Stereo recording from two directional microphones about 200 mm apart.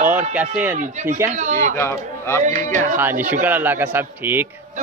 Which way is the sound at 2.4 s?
35° right (ahead or behind).